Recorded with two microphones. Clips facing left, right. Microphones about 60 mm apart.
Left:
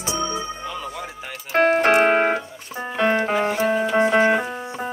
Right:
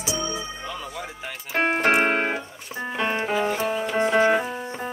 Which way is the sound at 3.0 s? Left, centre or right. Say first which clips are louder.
Left 5 dB; left.